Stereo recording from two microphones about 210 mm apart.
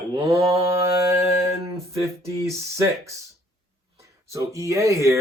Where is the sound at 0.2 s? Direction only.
25° right (ahead or behind).